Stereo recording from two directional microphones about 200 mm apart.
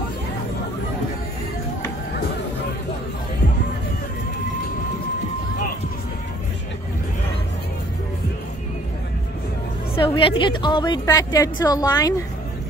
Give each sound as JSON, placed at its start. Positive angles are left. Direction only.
{"t": 9.9, "sound": "a woman's voice", "side_deg": 25}